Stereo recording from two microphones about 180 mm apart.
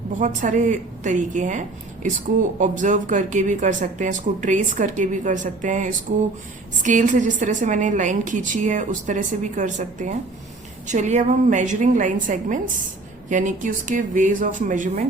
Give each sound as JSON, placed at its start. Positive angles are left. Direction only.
{"t": 0.2, "sound": "speech", "side_deg": -45}